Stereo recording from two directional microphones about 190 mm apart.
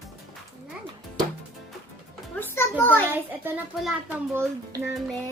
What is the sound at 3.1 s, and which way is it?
Speech, 10° right (ahead or behind).